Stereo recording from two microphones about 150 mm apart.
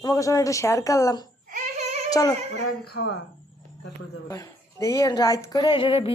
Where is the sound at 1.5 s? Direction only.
55° right (ahead or behind).